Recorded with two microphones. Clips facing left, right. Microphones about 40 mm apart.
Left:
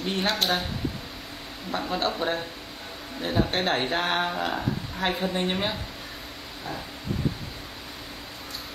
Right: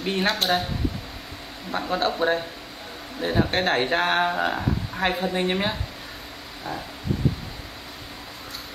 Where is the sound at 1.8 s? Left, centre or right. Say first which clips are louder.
Right 5 dB; centre.